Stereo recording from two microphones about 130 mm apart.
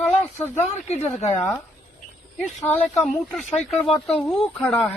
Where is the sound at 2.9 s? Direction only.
5° left (ahead or behind).